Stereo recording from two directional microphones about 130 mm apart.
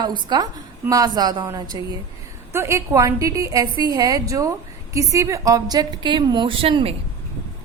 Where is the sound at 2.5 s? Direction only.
20° right (ahead or behind); by 6.9 s 40° right (ahead or behind).